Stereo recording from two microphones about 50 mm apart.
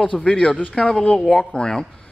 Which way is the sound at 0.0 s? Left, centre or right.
Centre.